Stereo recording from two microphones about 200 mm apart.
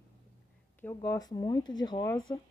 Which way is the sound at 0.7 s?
15° left (ahead or behind).